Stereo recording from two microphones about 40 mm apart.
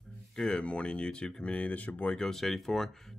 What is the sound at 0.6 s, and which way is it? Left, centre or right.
Speech, left.